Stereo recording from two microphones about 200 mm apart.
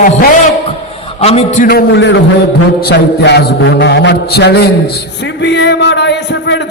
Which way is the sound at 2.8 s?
55° left (ahead or behind).